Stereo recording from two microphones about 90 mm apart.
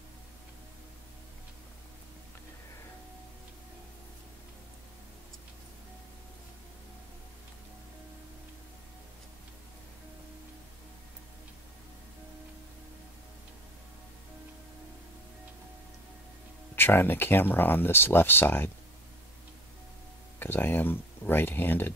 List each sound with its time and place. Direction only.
16.7 s speech: 25° left (ahead or behind)
20.3 s speech: 25° left (ahead or behind)